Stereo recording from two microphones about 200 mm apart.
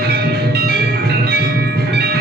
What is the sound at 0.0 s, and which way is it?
Music, 55° right (ahead or behind).